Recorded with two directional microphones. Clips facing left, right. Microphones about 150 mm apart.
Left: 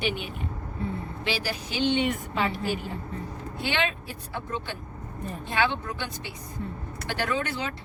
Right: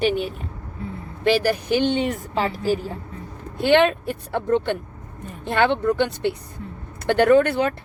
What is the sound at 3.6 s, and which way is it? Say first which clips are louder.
Speech: right 13 dB; 55° right (ahead or behind).